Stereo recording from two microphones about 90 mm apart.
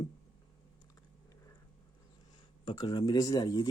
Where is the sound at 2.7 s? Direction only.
50° left (ahead or behind).